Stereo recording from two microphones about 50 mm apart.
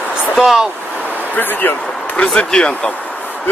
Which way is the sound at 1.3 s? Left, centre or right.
Left.